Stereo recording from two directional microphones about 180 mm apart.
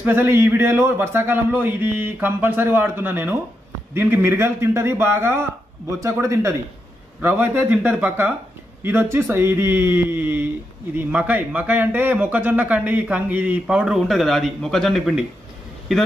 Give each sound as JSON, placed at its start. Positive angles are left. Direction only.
{"t": 0.0, "sound": "speech", "side_deg": -10}